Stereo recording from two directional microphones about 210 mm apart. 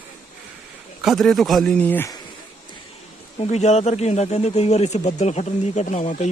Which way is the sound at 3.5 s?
30° left (ahead or behind).